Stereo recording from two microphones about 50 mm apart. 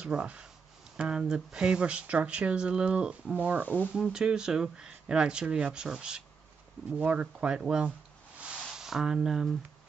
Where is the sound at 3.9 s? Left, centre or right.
Centre.